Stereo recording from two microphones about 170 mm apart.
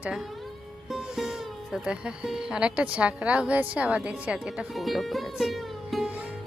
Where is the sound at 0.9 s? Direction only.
Centre (ahead or behind).